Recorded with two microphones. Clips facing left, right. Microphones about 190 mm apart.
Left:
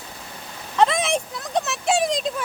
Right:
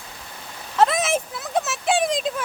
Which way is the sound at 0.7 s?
5° right (ahead or behind).